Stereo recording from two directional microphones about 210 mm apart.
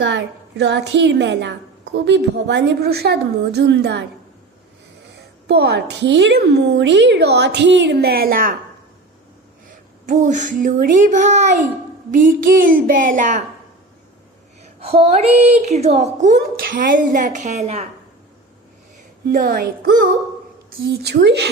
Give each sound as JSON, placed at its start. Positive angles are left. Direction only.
{"t": 0.0, "sound": "a woman's voice", "side_deg": -55}
{"t": 5.1, "sound": "a woman's voice", "side_deg": -50}
{"t": 10.1, "sound": "a woman's voice", "side_deg": -35}
{"t": 12.7, "sound": "a woman's voice", "side_deg": -40}
{"t": 14.6, "sound": "a woman's voice", "side_deg": -30}
{"t": 19.3, "sound": "a woman's voice", "side_deg": -45}